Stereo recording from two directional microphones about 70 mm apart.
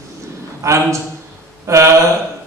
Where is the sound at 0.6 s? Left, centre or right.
Right.